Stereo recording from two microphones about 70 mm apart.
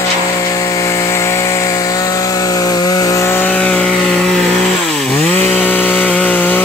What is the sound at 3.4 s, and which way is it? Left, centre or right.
Chainsaw, centre.